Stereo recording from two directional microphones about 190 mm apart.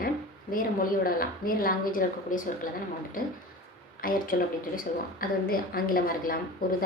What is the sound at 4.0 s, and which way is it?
A woman's voice, 50° left (ahead or behind).